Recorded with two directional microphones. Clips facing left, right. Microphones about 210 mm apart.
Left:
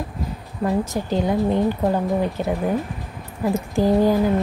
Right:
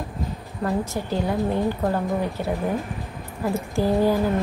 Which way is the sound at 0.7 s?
20° left (ahead or behind).